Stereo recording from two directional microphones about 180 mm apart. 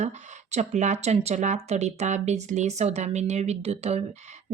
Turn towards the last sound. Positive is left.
turn(degrees=-35)  # may be behind; listen again after turning